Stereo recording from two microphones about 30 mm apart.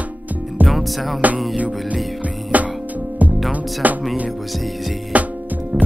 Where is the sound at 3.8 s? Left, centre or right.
Right.